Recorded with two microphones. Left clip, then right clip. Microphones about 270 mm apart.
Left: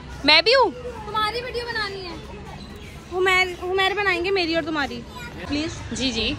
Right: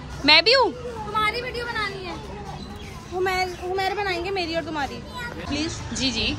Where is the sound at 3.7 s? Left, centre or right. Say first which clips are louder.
Left 4 dB; left.